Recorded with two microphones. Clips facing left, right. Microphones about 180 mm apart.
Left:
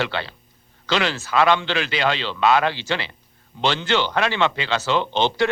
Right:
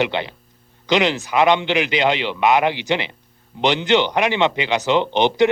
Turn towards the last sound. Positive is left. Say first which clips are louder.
# right 5 dB
turn(degrees=-15)  # may be behind; listen again after turning